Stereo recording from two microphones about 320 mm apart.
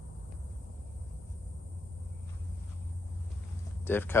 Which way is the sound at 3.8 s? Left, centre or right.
Centre.